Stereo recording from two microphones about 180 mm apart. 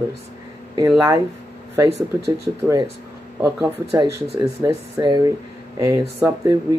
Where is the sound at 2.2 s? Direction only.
20° right (ahead or behind).